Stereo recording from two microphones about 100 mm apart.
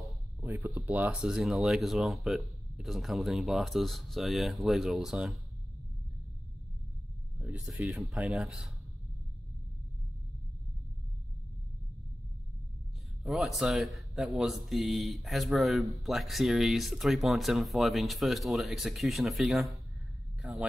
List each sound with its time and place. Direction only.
0.8 s speech: 15° right (ahead or behind)
1.3 s speech: 5° right (ahead or behind)
7.3 s speech: 10° right (ahead or behind)
13.2 s speech: centre (ahead or behind)